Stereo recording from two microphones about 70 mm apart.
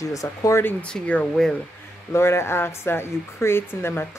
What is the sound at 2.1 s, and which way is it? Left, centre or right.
Speech, left.